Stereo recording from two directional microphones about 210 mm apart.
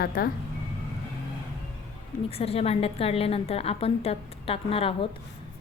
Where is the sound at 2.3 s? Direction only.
30° left (ahead or behind).